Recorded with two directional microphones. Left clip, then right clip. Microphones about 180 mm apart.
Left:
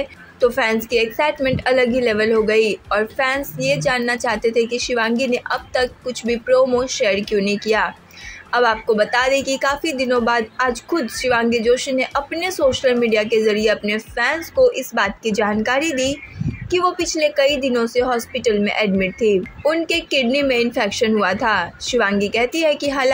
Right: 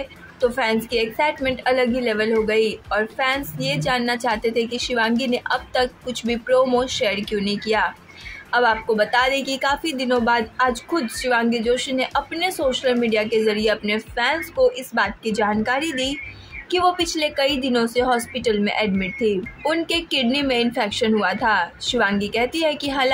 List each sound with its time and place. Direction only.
0.4 s a woman's voice: 15° left (ahead or behind)